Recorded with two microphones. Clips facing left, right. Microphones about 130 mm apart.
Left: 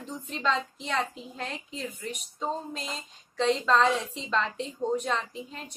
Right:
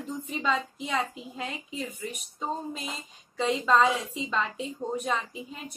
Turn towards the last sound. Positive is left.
turn(degrees=-5)  # may be behind; listen again after turning